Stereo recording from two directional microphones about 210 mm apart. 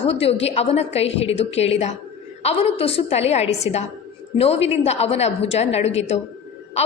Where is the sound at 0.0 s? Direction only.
30° left (ahead or behind).